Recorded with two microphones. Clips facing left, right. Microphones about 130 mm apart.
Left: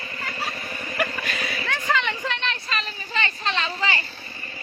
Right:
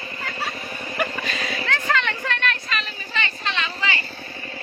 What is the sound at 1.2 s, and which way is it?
Vehicle, 10° left (ahead or behind).